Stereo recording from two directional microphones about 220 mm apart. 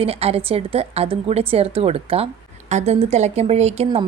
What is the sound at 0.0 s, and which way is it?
A woman's voice, 25° right (ahead or behind).